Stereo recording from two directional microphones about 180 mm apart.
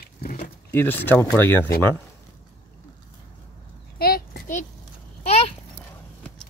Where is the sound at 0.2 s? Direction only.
50° left (ahead or behind).